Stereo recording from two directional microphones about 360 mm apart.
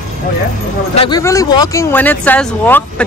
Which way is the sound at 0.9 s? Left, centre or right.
Centre.